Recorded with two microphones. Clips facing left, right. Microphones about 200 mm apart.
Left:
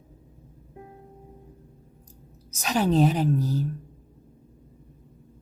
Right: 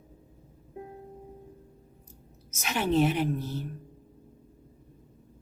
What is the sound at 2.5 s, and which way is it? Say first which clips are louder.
Speech: left 4 dB; 40° left (ahead or behind).